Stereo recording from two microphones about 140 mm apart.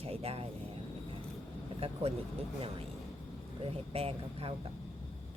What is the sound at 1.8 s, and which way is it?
Speech, 45° right (ahead or behind).